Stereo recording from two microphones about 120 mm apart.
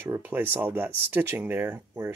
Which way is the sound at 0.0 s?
20° right (ahead or behind).